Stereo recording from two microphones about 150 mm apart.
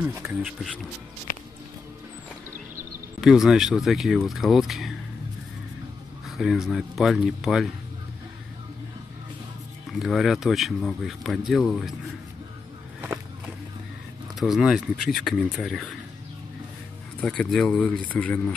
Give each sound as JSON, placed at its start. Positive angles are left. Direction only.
{"t": 0.0, "sound": "speech", "side_deg": -15}
{"t": 1.3, "sound": "music", "side_deg": 70}
{"t": 3.2, "sound": "speech", "side_deg": -5}
{"t": 6.2, "sound": "speech", "side_deg": 0}
{"t": 9.9, "sound": "speech", "side_deg": 0}
{"t": 14.4, "sound": "speech", "side_deg": 0}
{"t": 17.2, "sound": "speech", "side_deg": 10}